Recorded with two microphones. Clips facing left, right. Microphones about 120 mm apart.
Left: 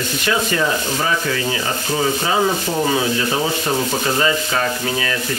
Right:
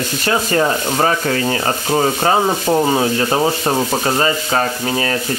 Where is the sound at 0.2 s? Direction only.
40° right (ahead or behind).